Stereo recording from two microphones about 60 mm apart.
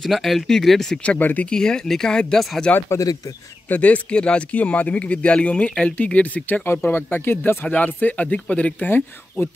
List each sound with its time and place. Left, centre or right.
0.0 s speech: centre
1.0 s speech: left
1.5 s speech: centre
2.9 s speech: left
3.6 s speech: left
6.9 s speech: left